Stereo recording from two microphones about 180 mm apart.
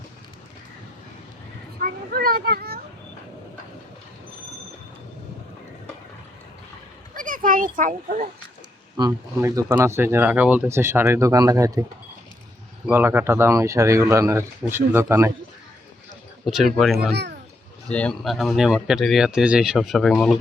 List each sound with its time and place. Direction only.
1.8 s children playing: 55° right (ahead or behind)
7.1 s a sound: 50° right (ahead or behind)
7.8 s a child's voice: 50° right (ahead or behind)
9.0 s speech: 20° right (ahead or behind)
12.9 s speech: 10° right (ahead or behind)
16.5 s speech: centre (ahead or behind)